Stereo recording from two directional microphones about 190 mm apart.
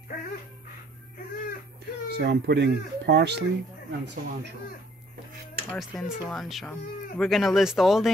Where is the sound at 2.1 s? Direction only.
60° right (ahead or behind).